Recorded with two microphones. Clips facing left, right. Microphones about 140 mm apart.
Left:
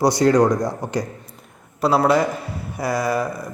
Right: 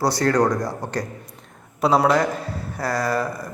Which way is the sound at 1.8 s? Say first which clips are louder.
Even; centre (ahead or behind).